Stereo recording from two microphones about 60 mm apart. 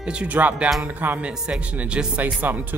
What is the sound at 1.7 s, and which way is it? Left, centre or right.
Speech, right.